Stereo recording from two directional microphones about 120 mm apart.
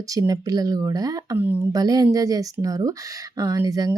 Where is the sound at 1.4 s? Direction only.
15° right (ahead or behind).